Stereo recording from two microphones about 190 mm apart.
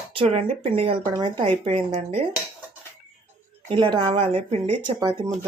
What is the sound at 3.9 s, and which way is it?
Speech, 30° right (ahead or behind).